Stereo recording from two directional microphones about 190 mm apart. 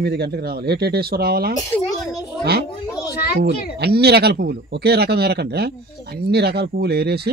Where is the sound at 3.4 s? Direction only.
60° right (ahead or behind).